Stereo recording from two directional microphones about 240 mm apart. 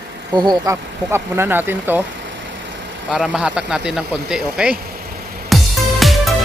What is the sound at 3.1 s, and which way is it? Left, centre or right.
Speech, centre.